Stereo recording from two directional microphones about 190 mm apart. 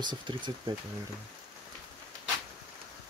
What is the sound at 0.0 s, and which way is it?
Speech, 25° right (ahead or behind).